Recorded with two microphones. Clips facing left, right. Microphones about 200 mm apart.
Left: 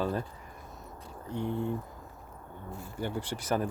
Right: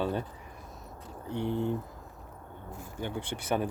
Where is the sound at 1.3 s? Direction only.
70° right (ahead or behind).